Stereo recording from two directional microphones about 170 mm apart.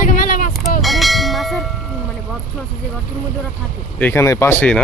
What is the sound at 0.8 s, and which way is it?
Church bell, centre (ahead or behind).